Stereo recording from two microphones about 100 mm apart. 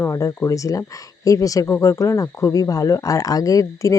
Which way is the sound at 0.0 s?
30° left (ahead or behind).